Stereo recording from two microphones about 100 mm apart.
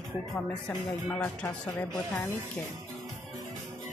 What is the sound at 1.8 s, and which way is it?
Speech, 20° left (ahead or behind).